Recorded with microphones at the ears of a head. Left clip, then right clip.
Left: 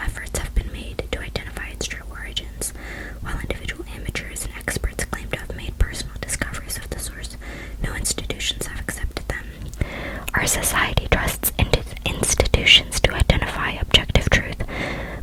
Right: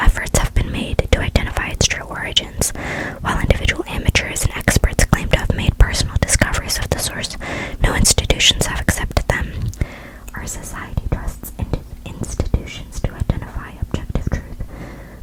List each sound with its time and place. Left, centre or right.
0.0 s whispering: right
10.3 s whispering: left